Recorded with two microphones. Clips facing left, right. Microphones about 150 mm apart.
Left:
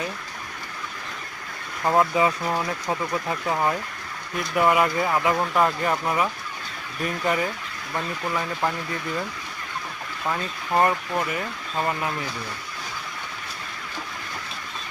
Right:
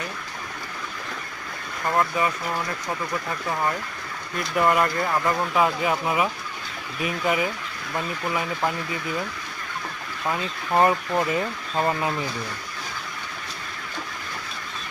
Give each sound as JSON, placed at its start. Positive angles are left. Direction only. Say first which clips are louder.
{"t": 1.9, "sound": "speech", "louder": "left 3 dB", "side_deg": 15}
{"t": 4.4, "sound": "speech", "louder": "left 1 dB", "side_deg": 5}
{"t": 10.2, "sound": "speech", "louder": "right 1 dB", "side_deg": -10}